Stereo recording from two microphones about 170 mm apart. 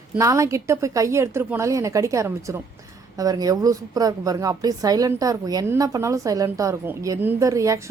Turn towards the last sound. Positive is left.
turn(degrees=-20)  # may be behind; listen again after turning